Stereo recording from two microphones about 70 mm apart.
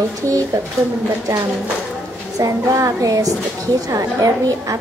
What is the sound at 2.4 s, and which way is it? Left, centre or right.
Speech, right.